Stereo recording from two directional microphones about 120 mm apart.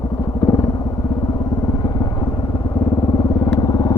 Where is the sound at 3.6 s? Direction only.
35° left (ahead or behind).